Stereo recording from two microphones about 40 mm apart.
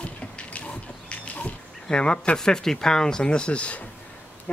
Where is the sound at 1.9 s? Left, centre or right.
Left.